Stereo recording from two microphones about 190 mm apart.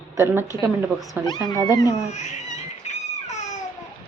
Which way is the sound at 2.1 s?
35° left (ahead or behind).